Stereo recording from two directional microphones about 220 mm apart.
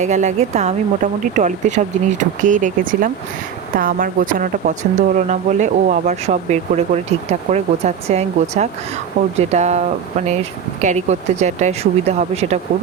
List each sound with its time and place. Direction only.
0.0 s speech: 35° right (ahead or behind)
10.8 s speech: 30° right (ahead or behind)